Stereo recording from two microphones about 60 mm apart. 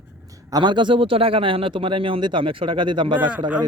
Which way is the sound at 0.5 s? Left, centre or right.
Right.